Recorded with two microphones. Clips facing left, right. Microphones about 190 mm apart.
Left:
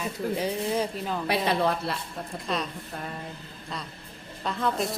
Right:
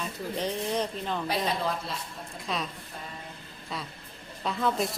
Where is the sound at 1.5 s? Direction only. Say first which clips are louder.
Left 5 dB; 65° left (ahead or behind).